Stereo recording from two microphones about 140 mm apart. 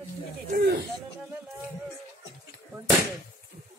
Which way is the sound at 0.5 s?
90° right.